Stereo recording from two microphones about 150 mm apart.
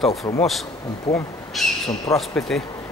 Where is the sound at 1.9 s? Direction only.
25° left (ahead or behind).